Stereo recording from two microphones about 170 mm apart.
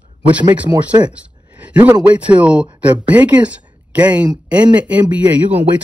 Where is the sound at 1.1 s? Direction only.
10° right (ahead or behind).